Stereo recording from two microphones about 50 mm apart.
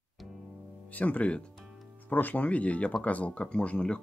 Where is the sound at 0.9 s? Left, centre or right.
Left.